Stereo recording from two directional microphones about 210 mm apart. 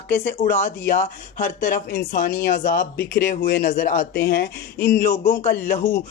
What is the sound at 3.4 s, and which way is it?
Speech, 45° left (ahead or behind).